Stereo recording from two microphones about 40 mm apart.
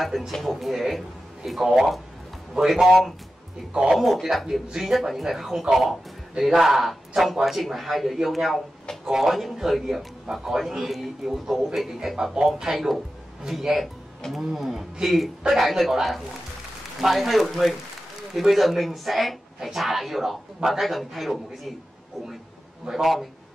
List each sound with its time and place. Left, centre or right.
0.3 s a man's voice: centre
12.7 s a man's voice: centre
22.9 s a man's voice: centre